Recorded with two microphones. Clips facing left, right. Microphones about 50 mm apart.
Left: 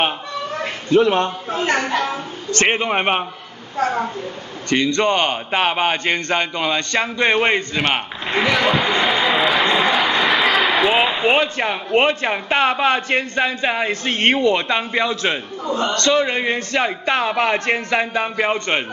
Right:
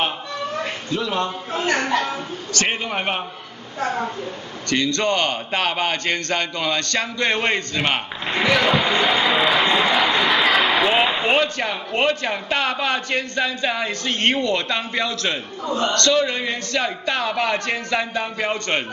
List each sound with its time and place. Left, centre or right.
0.9 s a man's voice: left
1.8 s a woman's voice: centre
2.5 s a man's voice: left
4.6 s a man's voice: left
8.6 s speech: centre
9.9 s a sound: centre
11.3 s a man's voice: centre